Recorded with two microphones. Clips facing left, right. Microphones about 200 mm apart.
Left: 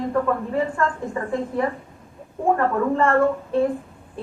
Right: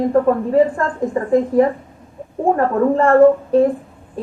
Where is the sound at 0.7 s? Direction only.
35° right (ahead or behind).